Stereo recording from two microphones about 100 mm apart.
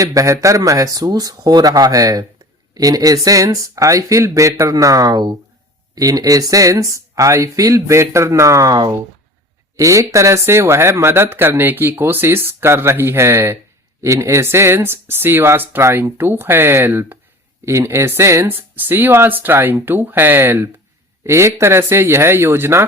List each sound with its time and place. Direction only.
0.0 s speech: 35° right (ahead or behind)